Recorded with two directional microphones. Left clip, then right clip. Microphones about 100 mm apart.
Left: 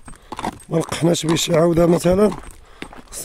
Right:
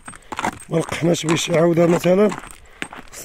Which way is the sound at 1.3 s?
70° left (ahead or behind).